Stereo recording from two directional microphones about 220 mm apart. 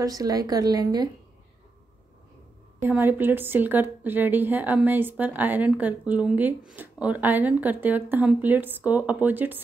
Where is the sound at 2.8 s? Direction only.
10° right (ahead or behind).